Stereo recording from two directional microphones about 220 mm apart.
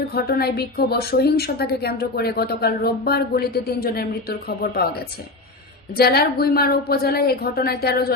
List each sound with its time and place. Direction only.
0.1 s a woman's voice: 45° left (ahead or behind)
5.9 s a woman's voice: 45° left (ahead or behind)